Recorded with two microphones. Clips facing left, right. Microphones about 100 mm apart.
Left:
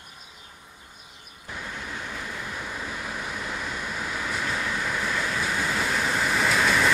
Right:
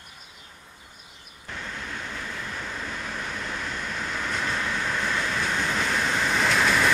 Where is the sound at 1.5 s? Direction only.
10° left (ahead or behind).